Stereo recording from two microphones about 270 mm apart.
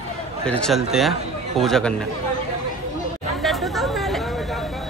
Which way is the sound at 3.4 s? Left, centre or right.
Centre.